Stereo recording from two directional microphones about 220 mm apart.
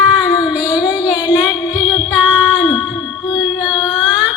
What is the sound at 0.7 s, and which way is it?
Music, 15° left (ahead or behind).